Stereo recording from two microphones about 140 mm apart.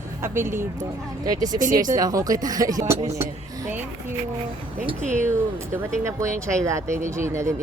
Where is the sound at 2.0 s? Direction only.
25° right (ahead or behind).